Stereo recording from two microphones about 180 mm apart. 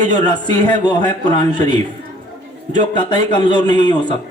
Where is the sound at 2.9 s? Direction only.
25° left (ahead or behind).